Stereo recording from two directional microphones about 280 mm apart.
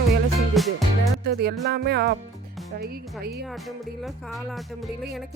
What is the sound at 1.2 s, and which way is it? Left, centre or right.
Speech, right.